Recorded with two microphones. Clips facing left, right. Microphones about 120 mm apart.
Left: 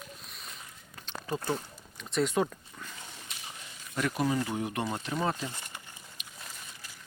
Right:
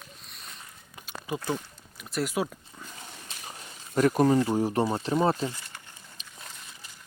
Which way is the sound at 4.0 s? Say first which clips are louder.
Right 8 dB; 40° right (ahead or behind).